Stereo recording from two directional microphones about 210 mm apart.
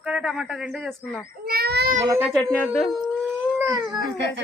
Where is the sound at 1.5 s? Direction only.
50° right (ahead or behind).